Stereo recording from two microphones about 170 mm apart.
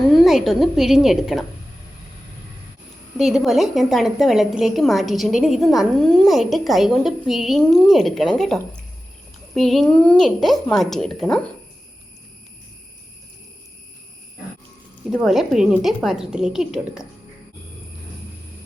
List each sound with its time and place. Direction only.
0.2 s a woman's voice: centre (ahead or behind)
3.2 s a woman's voice: centre (ahead or behind)
15.1 s a woman's voice: centre (ahead or behind)